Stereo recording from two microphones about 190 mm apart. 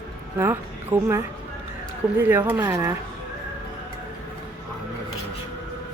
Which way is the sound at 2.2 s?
10° right (ahead or behind).